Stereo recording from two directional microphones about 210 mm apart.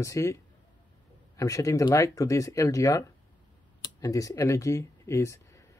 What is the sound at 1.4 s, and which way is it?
Speech, 15° left (ahead or behind).